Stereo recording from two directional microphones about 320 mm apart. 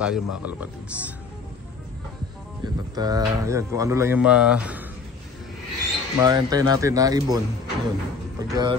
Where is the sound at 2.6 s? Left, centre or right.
Centre.